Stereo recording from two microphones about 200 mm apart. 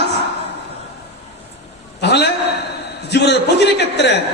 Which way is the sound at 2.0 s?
55° left (ahead or behind).